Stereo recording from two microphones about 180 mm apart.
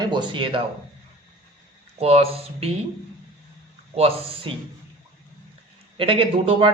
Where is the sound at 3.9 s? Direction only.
35° right (ahead or behind).